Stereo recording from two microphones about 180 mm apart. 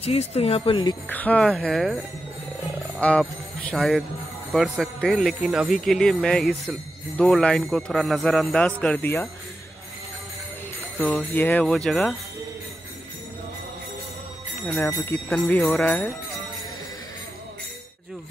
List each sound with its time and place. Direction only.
0.0 s speech: 35° left (ahead or behind)
1.0 s speech: 10° left (ahead or behind)
3.0 s speech: 5° left (ahead or behind)
11.0 s speech: 10° left (ahead or behind)
14.7 s speech: 10° left (ahead or behind)